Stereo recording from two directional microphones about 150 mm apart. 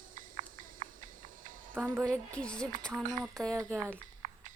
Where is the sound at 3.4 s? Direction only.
5° left (ahead or behind).